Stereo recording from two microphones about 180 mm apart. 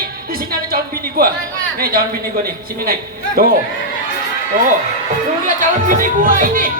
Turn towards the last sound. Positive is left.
turn(degrees=-50)  # may be behind; listen again after turning